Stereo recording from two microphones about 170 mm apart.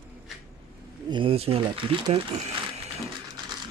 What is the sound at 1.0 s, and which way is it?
Speech, 30° right (ahead or behind).